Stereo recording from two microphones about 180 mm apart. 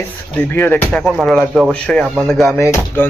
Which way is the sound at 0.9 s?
Centre (ahead or behind).